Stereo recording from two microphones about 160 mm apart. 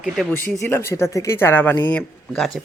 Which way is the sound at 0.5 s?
15° left (ahead or behind).